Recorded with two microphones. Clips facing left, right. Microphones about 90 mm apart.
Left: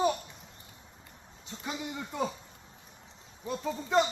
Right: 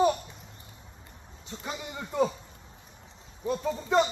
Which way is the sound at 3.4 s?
5° left (ahead or behind).